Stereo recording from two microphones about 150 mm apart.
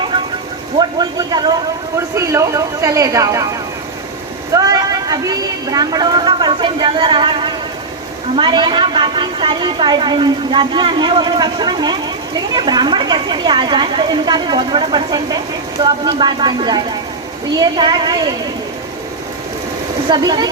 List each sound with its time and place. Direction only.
0.8 s a woman's voice: 30° right (ahead or behind)
4.5 s a woman's voice: 25° right (ahead or behind)
20.1 s a woman's voice: 30° right (ahead or behind)